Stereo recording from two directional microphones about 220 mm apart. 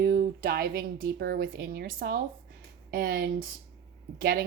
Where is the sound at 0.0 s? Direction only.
45° right (ahead or behind).